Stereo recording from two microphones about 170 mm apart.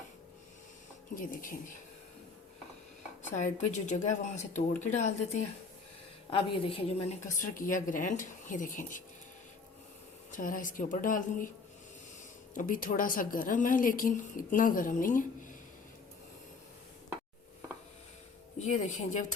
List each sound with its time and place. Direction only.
1.1 s a woman's voice: 55° left (ahead or behind)
3.2 s a woman's voice: 45° left (ahead or behind)
6.3 s a woman's voice: 30° left (ahead or behind)
7.3 s a woman's voice: 50° left (ahead or behind)
10.3 s a woman's voice: 50° left (ahead or behind)
12.5 s a woman's voice: 55° left (ahead or behind)
18.6 s a woman's voice: 45° left (ahead or behind)